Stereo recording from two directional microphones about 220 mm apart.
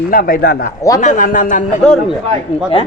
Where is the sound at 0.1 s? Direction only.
40° left (ahead or behind).